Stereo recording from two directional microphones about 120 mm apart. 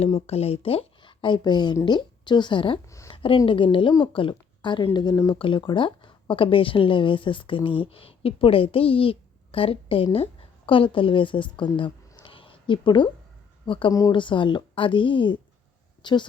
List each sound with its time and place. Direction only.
0.3 s a woman's voice: 60° left (ahead or behind)
11.5 s a sound: 40° left (ahead or behind)
13.7 s a woman's voice: 45° left (ahead or behind)